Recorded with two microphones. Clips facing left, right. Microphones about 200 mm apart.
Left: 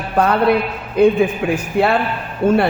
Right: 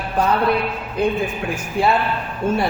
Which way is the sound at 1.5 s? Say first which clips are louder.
Left 3 dB; 60° left (ahead or behind).